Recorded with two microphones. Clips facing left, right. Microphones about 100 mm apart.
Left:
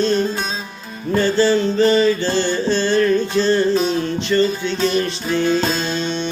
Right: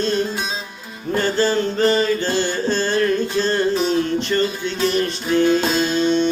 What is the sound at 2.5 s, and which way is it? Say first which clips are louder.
Music: left 2 dB; 45° right (ahead or behind).